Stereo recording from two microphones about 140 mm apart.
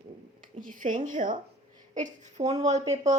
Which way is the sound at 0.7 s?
65° right (ahead or behind).